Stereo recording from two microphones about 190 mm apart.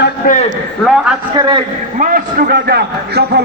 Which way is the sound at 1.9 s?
45° right (ahead or behind).